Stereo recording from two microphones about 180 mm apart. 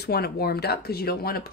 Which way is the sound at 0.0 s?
60° left (ahead or behind).